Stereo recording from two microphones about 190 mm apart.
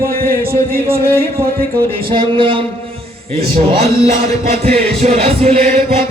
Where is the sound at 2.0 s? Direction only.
25° right (ahead or behind).